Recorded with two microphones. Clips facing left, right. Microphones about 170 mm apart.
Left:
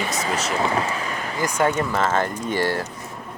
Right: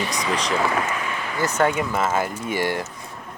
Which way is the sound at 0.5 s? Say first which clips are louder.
Left 1 dB; 30° left (ahead or behind).